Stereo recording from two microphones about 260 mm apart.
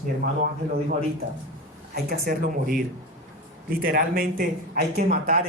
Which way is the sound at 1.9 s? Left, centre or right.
Right.